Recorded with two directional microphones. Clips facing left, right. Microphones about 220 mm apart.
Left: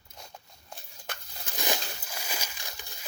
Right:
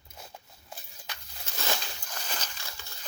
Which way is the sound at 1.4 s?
15° left (ahead or behind).